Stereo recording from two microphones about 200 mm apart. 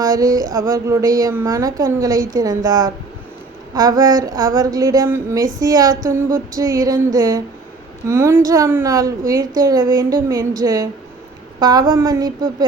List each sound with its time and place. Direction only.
0.0 s a woman's voice: 20° right (ahead or behind)
6.2 s a sound: 45° right (ahead or behind)
6.6 s a woman's voice: 20° right (ahead or behind)